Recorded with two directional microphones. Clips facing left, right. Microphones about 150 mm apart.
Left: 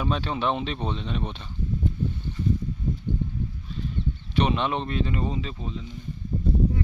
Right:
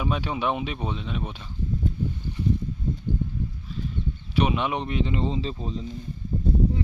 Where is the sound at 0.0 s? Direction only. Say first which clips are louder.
Even; 10° right (ahead or behind).